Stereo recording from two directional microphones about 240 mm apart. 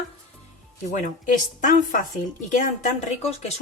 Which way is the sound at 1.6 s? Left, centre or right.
Left.